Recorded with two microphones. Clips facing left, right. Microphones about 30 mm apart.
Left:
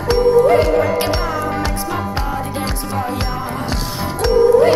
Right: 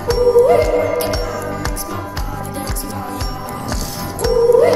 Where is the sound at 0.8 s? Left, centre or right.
Left.